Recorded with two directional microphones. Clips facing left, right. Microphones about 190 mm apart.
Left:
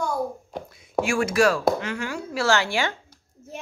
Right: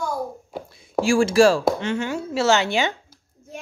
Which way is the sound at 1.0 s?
30° right (ahead or behind).